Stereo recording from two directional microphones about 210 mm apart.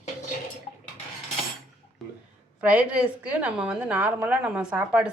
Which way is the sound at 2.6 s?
5° right (ahead or behind).